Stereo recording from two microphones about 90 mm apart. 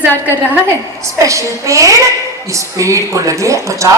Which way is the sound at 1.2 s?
35° right (ahead or behind).